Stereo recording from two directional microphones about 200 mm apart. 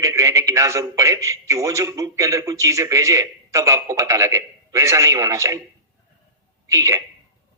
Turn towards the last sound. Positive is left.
turn(degrees=-15)  # may be behind; listen again after turning